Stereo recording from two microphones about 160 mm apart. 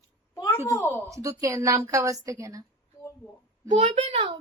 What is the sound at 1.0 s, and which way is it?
A woman's voice, 20° right (ahead or behind).